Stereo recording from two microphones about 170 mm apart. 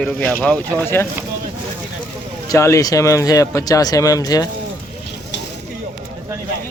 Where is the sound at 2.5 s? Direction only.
15° left (ahead or behind).